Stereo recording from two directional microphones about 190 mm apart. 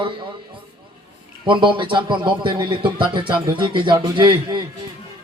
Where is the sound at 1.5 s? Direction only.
25° right (ahead or behind).